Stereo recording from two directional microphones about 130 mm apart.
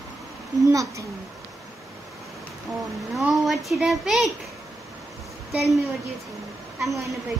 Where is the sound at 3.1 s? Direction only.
Centre (ahead or behind).